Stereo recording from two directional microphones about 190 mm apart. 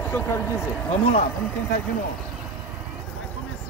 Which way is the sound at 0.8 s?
30° left (ahead or behind).